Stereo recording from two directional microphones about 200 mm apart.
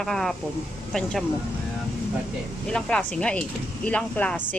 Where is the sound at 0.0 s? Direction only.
Centre (ahead or behind).